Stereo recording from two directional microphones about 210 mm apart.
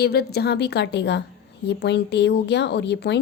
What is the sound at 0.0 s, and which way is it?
A woman's voice, 50° left (ahead or behind).